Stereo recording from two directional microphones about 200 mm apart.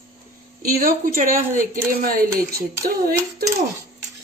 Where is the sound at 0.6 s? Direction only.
45° right (ahead or behind).